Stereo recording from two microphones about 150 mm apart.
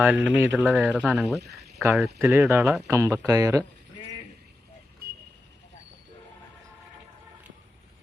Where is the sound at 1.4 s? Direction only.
90° right.